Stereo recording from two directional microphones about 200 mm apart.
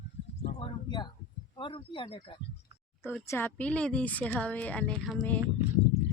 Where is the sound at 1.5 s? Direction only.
25° left (ahead or behind).